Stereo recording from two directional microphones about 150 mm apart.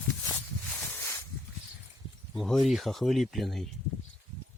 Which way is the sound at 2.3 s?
Centre (ahead or behind).